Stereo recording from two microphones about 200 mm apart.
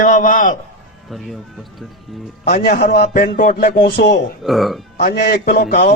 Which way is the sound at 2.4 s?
50° left (ahead or behind).